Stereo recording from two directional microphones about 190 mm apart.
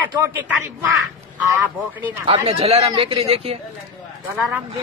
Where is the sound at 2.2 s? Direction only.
30° right (ahead or behind).